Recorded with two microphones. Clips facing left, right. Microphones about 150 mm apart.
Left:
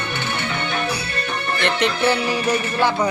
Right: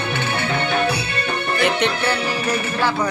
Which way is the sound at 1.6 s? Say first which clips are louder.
Right 1 dB; centre (ahead or behind).